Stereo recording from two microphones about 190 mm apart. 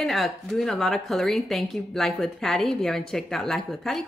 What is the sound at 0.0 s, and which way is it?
A woman's voice, centre (ahead or behind).